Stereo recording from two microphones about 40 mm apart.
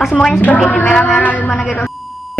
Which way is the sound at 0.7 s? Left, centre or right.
Left.